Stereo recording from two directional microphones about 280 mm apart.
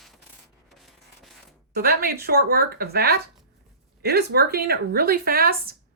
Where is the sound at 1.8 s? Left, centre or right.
Right.